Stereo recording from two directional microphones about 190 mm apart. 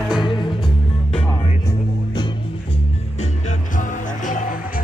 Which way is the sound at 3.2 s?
40° left (ahead or behind).